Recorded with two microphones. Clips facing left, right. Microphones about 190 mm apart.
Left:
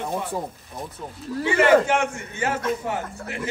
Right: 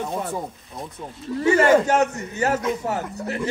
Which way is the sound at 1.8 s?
40° right (ahead or behind).